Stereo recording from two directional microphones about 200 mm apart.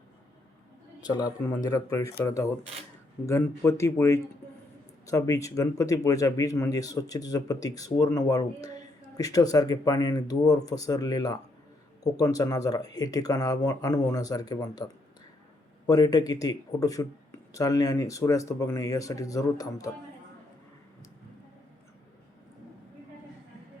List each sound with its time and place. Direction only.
1.0 s speech: 20° left (ahead or behind)
15.9 s speech: 20° left (ahead or behind)